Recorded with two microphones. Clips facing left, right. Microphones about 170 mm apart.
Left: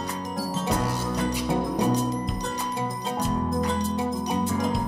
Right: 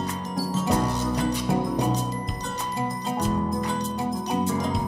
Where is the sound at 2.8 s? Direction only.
Centre (ahead or behind).